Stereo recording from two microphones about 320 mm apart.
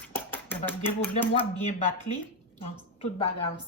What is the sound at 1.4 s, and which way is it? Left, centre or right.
Speech, left.